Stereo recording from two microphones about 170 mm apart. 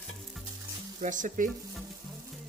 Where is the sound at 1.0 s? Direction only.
50° right (ahead or behind).